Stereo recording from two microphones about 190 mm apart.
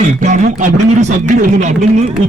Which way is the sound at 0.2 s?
40° right (ahead or behind).